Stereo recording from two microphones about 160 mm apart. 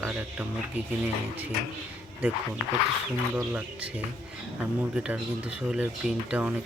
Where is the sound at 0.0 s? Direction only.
5° right (ahead or behind).